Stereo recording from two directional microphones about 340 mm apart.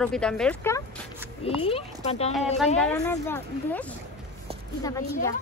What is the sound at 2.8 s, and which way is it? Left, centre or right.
A woman's voice, centre.